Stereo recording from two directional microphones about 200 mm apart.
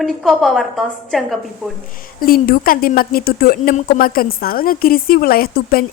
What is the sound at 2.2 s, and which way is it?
A woman's voice, 45° left (ahead or behind).